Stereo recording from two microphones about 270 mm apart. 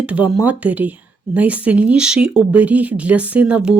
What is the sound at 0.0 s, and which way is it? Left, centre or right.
Speech, centre.